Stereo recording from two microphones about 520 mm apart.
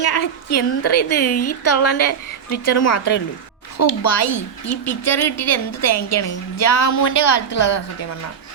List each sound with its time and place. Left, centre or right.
0.5 s a woman's voice: left
1.2 s a woman's voice: centre
1.6 s a woman's voice: left